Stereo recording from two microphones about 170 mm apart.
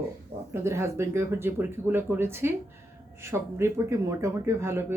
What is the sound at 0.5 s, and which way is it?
Speech, 15° right (ahead or behind).